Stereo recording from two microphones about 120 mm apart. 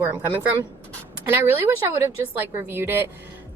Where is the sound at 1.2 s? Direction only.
20° right (ahead or behind).